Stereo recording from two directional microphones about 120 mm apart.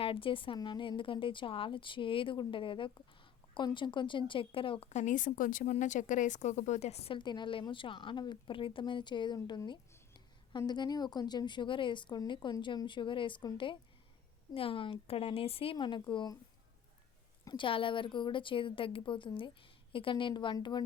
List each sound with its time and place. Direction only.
0.0 s a woman's voice: 45° left (ahead or behind)
4.9 s a woman's voice: 85° left; by 7.2 s 60° left (ahead or behind)
7.2 s a woman's voice: 40° left (ahead or behind)
17.4 s a woman's voice: 40° left (ahead or behind)